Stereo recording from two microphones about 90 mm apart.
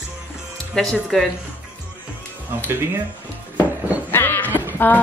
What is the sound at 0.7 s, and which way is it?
Speech, 5° left (ahead or behind).